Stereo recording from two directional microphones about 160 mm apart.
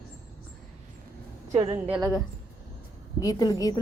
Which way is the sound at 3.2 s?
20° left (ahead or behind).